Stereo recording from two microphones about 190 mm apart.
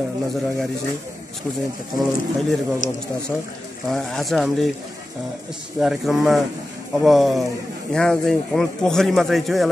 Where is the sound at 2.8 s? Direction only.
45° left (ahead or behind).